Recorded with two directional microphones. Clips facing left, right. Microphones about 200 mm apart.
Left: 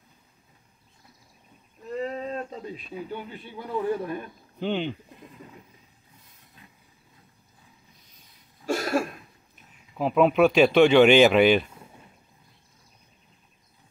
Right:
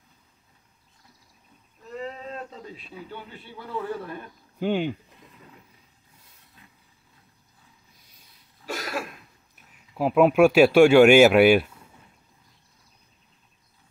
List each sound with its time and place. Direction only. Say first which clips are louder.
2.2 s a man's voice: left 4 dB; 15° left (ahead or behind)
4.6 s speech: right 3 dB; 10° right (ahead or behind)
8.6 s cough: left 7 dB; 45° left (ahead or behind)
9.9 s speech: right 2 dB; 5° right (ahead or behind)